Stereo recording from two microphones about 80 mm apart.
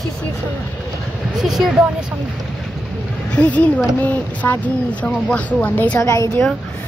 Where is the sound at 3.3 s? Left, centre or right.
Centre.